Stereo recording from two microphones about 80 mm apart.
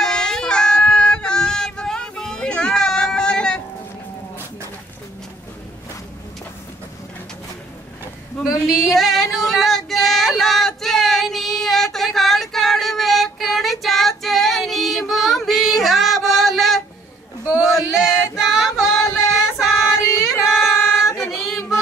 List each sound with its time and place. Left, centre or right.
0.0 s child singing: centre
8.6 s female singing: centre
17.6 s a sound: centre
19.3 s child singing: centre
19.9 s female singing: left
21.3 s child singing: centre